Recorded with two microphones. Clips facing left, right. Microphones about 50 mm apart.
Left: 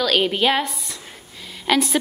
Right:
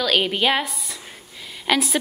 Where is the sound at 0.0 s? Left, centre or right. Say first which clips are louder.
Left 1 dB; centre.